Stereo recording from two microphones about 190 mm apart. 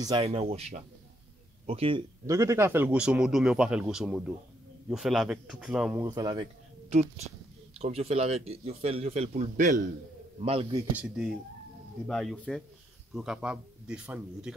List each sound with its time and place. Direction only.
0.0 s speech: 30° right (ahead or behind); by 6.0 s 5° right (ahead or behind)
6.0 s a man's voice: 20° right (ahead or behind)
6.9 s speech: 35° right (ahead or behind)
9.4 s a man's voice: 45° right (ahead or behind)
10.4 s a man's voice: 30° right (ahead or behind)
12.1 s speech: 5° left (ahead or behind)